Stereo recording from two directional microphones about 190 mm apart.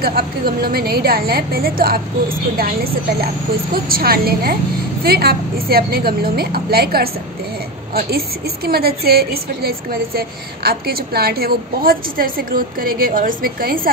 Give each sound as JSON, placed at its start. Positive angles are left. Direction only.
{"t": 0.0, "sound": "a woman's voice", "side_deg": -55}
{"t": 8.6, "sound": "a woman's voice", "side_deg": -55}